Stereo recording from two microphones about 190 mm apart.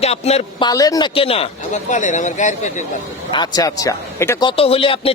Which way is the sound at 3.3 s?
20° left (ahead or behind).